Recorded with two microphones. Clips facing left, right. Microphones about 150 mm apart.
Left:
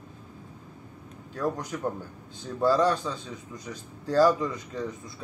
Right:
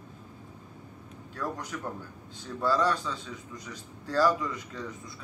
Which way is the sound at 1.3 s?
30° left (ahead or behind).